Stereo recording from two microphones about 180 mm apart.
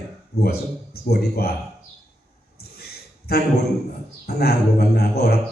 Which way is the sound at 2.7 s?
60° left (ahead or behind).